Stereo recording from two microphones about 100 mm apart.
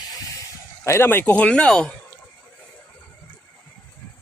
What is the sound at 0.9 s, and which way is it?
Speech, 25° left (ahead or behind).